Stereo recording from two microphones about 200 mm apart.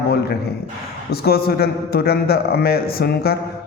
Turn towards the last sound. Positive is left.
turn(degrees=50)  # may be behind; listen again after turning